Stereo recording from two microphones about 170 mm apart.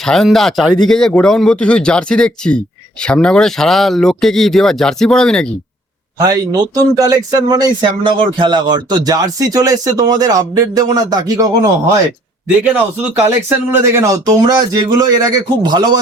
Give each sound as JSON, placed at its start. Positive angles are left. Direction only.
{"t": 0.0, "sound": "speech", "side_deg": 5}
{"t": 6.1, "sound": "speech", "side_deg": -20}
{"t": 12.6, "sound": "speech", "side_deg": -10}